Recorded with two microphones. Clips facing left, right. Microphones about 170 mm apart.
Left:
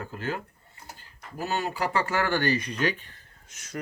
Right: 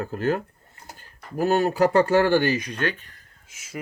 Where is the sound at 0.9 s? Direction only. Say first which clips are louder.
Right 10 dB; 50° right (ahead or behind).